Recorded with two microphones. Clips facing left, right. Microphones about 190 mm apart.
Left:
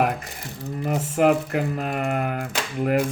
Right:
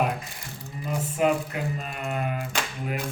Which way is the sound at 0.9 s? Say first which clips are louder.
Left 5 dB; 70° left (ahead or behind).